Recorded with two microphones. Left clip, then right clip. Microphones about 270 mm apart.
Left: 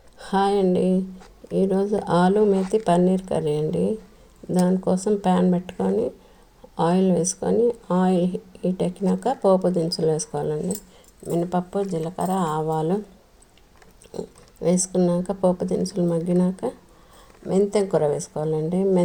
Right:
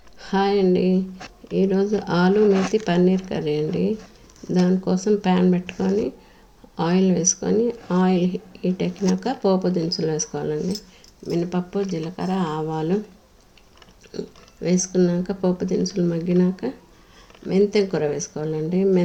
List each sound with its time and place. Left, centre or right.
0.2 s speech: left
14.1 s speech: left